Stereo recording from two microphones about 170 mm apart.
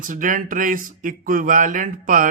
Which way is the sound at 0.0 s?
50° right (ahead or behind).